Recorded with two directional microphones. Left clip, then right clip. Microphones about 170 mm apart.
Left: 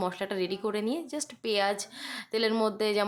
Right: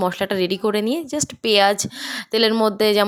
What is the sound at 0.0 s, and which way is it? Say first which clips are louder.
Speech: right 10 dB; 40° right (ahead or behind).